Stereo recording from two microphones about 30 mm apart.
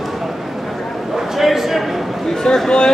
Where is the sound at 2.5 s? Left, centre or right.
Left.